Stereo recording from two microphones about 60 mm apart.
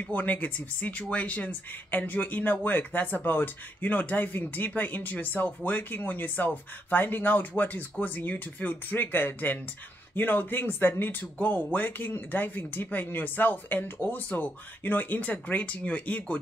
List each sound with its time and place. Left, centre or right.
0.1 s speech: left